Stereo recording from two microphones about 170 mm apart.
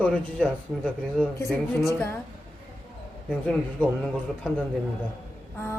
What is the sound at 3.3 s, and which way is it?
Speech, 5° left (ahead or behind).